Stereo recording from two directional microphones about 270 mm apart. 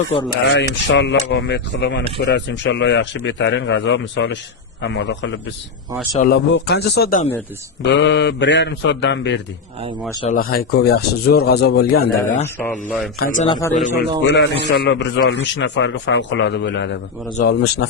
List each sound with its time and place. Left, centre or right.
0.4 s a man's voice: left
13.5 s a man's voice: centre
13.7 s a man's voice: left
14.3 s a man's voice: left